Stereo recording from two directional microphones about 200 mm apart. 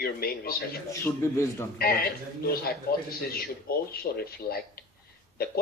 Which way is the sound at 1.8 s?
50° left (ahead or behind).